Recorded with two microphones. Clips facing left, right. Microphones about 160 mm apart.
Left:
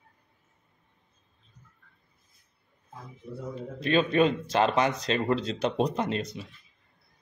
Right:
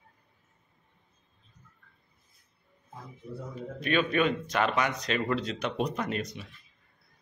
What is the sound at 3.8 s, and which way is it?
Speech, 30° left (ahead or behind).